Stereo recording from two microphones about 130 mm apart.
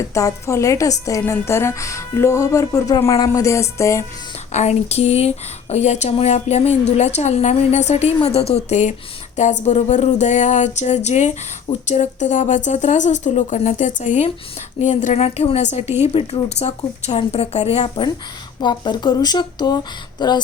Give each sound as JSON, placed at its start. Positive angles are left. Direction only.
{"t": 0.0, "sound": "speech", "side_deg": 25}
{"t": 4.5, "sound": "speech", "side_deg": 55}